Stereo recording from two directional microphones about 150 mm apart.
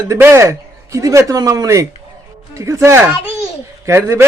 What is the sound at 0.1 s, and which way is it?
Speech, 20° right (ahead or behind).